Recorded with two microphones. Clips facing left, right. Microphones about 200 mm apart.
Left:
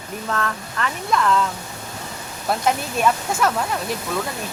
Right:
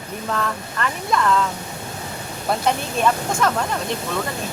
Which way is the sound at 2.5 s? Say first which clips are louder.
Even; 5° left (ahead or behind).